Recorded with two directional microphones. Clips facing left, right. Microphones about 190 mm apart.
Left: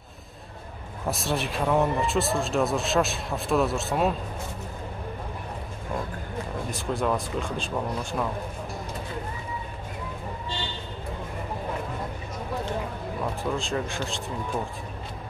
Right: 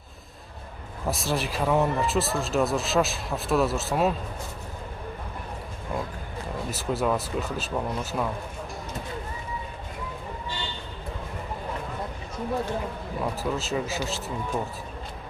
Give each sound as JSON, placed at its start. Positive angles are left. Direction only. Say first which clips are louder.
{"t": 1.0, "sound": "speech", "louder": "even", "side_deg": 0}
{"t": 6.7, "sound": "speech", "louder": "right 1 dB", "side_deg": -5}
{"t": 13.2, "sound": "speech", "louder": "right 1 dB", "side_deg": -5}